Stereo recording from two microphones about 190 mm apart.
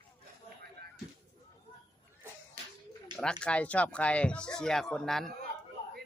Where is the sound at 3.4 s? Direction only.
5° left (ahead or behind).